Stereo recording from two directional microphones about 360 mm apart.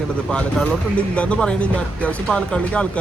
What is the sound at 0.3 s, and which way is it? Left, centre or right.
Speech, centre.